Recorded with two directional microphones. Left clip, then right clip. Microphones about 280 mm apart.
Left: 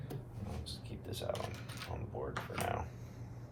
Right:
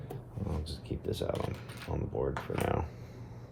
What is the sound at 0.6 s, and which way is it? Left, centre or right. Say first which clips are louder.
Speech: right 6 dB; right.